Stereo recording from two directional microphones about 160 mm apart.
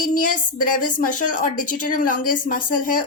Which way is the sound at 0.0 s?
55° left (ahead or behind).